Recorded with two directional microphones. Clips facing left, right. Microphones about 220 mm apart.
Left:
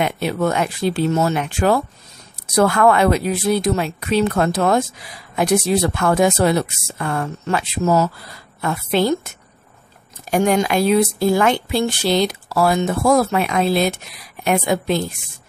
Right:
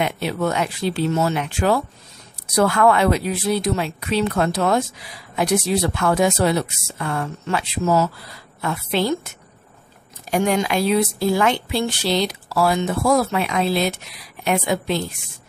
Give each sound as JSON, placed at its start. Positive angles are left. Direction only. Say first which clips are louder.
{"t": 0.0, "sound": "speech", "louder": "left 2 dB", "side_deg": 50}
{"t": 10.3, "sound": "speech", "louder": "left 3 dB", "side_deg": 45}